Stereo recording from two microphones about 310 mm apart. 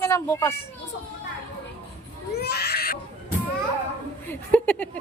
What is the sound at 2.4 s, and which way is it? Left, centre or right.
Baby cry, left.